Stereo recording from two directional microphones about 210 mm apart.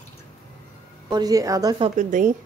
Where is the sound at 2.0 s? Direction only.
35° right (ahead or behind).